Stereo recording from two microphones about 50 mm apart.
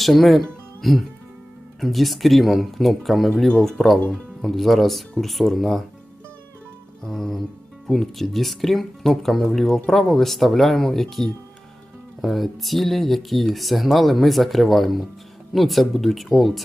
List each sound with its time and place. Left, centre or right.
0.0 s speech: centre
3.6 s music: centre
4.5 s speech: centre
7.0 s music: centre
7.9 s speech: centre